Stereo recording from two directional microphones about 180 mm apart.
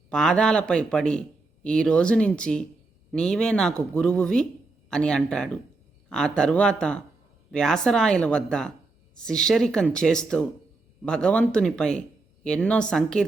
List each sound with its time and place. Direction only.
0.1 s speech: 5° left (ahead or behind)